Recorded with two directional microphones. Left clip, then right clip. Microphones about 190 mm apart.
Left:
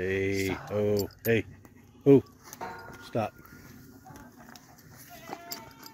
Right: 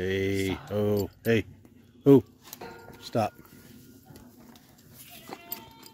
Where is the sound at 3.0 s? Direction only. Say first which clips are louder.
Right 4 dB; 30° right (ahead or behind).